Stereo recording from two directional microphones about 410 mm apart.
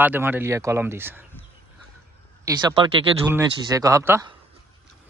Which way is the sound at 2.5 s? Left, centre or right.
Centre.